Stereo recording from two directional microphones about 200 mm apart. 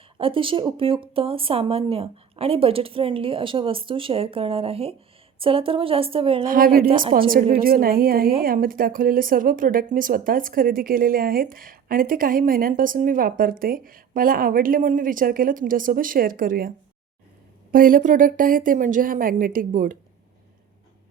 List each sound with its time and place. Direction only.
0.2 s a woman's voice: 25° right (ahead or behind)
6.5 s speech: 45° right (ahead or behind)